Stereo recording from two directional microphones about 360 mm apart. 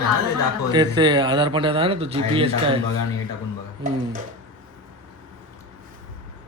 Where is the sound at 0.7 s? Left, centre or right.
Centre.